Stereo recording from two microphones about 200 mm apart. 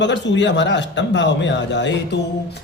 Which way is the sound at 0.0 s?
60° left (ahead or behind).